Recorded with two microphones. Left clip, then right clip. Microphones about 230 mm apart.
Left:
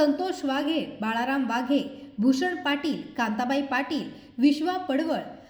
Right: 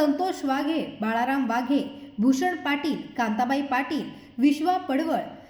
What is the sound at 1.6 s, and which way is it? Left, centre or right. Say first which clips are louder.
A woman's voice: right 1 dB; left.